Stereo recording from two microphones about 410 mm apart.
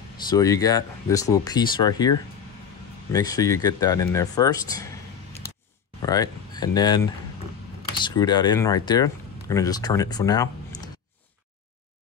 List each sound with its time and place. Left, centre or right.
0.3 s speech: centre
6.0 s speech: centre
8.0 s speech: centre